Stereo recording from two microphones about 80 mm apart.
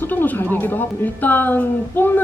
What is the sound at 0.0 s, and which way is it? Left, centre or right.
Speech, left.